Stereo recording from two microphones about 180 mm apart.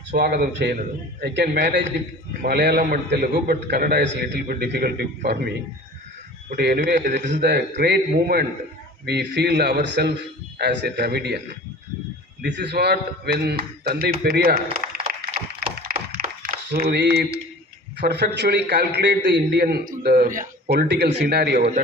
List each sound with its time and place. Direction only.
0.1 s a man's voice: 55° right (ahead or behind); by 1.9 s 75° right (ahead or behind)
2.4 s a man's voice: 65° right (ahead or behind)
6.6 s a man's voice: 65° right (ahead or behind)
7.2 s a man's voice: 40° right (ahead or behind)
7.4 s a man's voice: 65° right (ahead or behind)
12.4 s a man's voice: 70° right (ahead or behind); by 15.3 s 55° right (ahead or behind)
15.4 s a sound: 55° right (ahead or behind)
18.0 s a man's voice: 65° right (ahead or behind)